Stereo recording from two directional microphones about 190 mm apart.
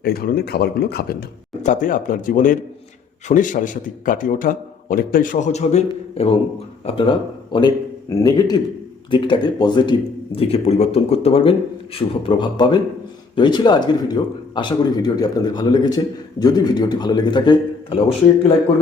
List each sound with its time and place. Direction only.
0.0 s speech: 55° left (ahead or behind)
1.6 s a man's voice: 45° left (ahead or behind); by 18.0 s 25° left (ahead or behind)